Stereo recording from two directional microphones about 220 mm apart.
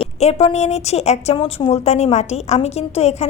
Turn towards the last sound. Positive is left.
turn(degrees=30)  # may be behind; listen again after turning